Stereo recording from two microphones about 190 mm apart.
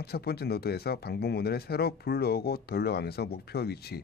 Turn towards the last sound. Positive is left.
turn(degrees=55)  # may be behind; listen again after turning